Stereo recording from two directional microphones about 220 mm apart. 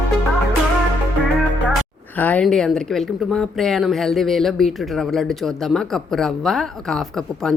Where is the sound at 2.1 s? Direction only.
5° left (ahead or behind).